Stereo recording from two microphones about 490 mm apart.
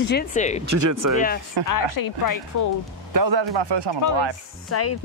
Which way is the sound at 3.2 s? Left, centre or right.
Right.